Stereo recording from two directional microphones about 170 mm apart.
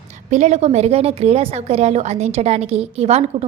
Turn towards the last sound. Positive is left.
turn(degrees=-35)  # may be behind; listen again after turning